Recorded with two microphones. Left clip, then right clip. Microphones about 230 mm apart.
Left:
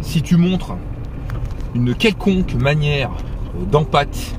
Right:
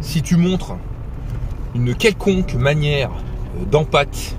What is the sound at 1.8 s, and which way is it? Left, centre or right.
Speech, centre.